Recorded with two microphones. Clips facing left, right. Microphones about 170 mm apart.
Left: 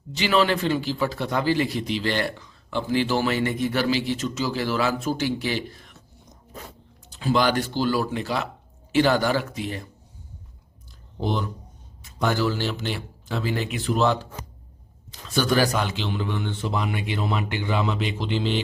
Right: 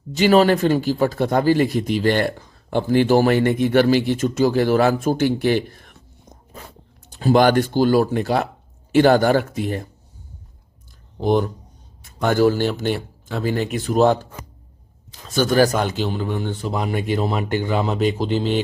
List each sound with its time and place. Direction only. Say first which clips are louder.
0.1 s speech: right 7 dB; 45° right (ahead or behind)
11.3 s speech: right 9 dB; 50° right (ahead or behind)
15.3 s speech: right 5 dB; 45° right (ahead or behind)